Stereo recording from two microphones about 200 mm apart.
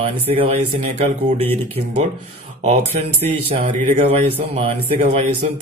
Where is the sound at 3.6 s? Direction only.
35° right (ahead or behind).